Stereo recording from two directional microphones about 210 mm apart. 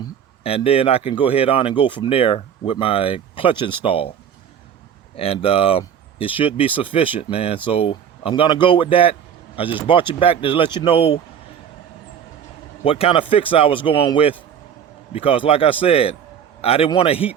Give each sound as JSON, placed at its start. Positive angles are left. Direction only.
{"t": 0.4, "sound": "speech", "side_deg": 30}
{"t": 5.1, "sound": "speech", "side_deg": 25}
{"t": 12.8, "sound": "speech", "side_deg": 25}